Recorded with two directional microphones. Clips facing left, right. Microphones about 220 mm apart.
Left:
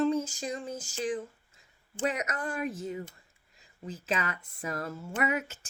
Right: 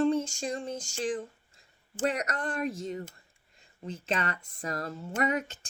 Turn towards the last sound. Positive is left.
turn(degrees=5)  # may be behind; listen again after turning